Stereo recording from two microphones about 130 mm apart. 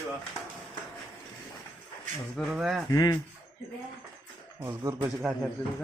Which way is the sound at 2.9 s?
30° left (ahead or behind).